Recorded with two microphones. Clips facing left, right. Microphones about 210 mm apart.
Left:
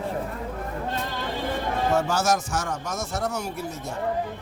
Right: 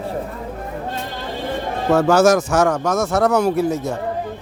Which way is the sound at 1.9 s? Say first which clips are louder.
Right 12 dB; 75° right (ahead or behind).